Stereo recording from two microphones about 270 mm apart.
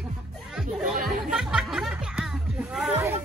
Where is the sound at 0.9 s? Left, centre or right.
Right.